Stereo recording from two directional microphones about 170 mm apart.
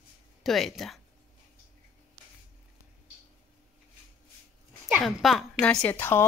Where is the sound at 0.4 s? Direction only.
Centre (ahead or behind).